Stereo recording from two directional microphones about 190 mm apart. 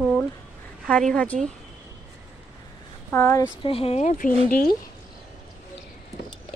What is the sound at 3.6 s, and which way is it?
Speech, 30° left (ahead or behind).